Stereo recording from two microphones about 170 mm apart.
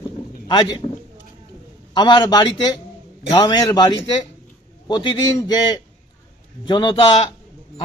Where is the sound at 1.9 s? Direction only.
25° left (ahead or behind).